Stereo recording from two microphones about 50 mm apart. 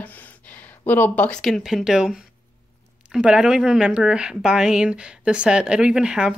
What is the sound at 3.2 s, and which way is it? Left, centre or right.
A woman's voice, centre.